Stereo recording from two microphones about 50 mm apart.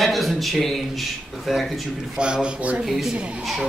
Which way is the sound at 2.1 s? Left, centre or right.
Centre.